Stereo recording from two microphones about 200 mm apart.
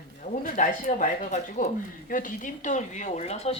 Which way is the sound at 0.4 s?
40° left (ahead or behind).